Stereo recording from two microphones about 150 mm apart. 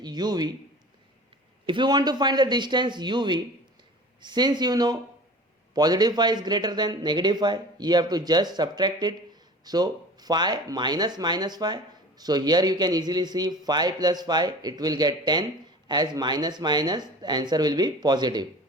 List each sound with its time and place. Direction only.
0.0 s speech: 25° right (ahead or behind)
1.6 s speech: 30° right (ahead or behind)